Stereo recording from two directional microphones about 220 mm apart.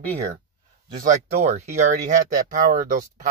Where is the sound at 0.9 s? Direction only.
35° right (ahead or behind).